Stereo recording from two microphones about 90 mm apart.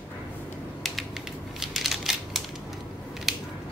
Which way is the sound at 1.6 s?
Centre (ahead or behind).